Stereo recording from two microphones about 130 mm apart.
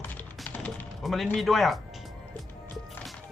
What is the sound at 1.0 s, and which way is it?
A man's voice, centre (ahead or behind).